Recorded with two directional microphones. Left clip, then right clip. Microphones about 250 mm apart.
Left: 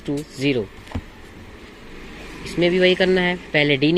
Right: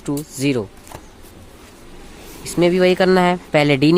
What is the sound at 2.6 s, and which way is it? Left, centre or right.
Speech, right.